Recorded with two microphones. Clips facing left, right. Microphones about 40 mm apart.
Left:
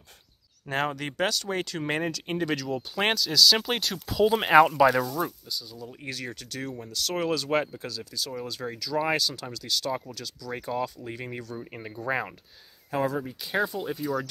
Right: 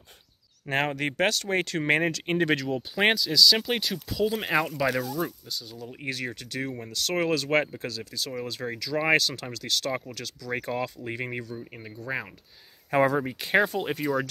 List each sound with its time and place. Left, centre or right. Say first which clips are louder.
0.7 s speech: right 2 dB; right
2.9 s speech: right 3 dB; centre
4.2 s speech: left 7 dB; left
4.7 s speech: left 5 dB; centre
5.6 s speech: right 1 dB; right
9.8 s speech: even; right
10.1 s speech: right 1 dB; right
10.7 s speech: even; right
11.5 s speech: left 2 dB; centre
12.9 s speech: right 5 dB; right
13.4 s speech: right 4 dB; right